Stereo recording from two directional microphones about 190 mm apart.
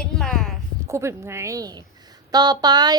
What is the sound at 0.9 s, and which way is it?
A woman's voice, 15° right (ahead or behind).